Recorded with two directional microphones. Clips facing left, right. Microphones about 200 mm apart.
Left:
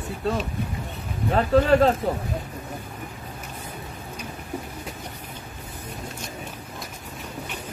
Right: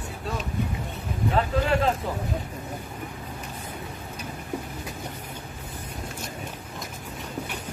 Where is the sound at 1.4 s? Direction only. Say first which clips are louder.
Left 7 dB; 40° left (ahead or behind).